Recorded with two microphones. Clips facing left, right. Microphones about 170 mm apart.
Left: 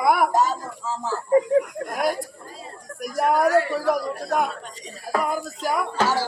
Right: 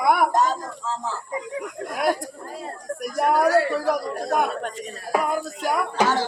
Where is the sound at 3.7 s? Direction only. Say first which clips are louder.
Even; centre (ahead or behind).